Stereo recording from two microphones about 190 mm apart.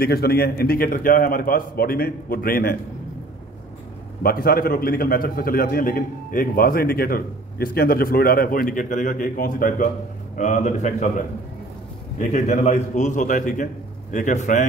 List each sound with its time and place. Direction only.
0.0 s a man's voice: 55° left (ahead or behind)
4.2 s a man's voice: 50° left (ahead or behind)